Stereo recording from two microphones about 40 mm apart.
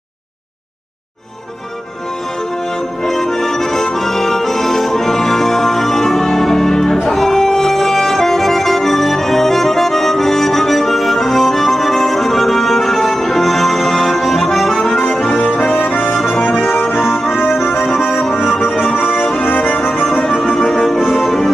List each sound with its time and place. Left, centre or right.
3.0 s accordion: centre
15.7 s accordion: left
18.8 s music: centre
19.4 s music: left
20.1 s music: centre